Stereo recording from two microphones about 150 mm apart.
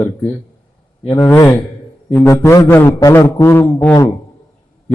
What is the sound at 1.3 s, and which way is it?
A man's voice, 15° left (ahead or behind).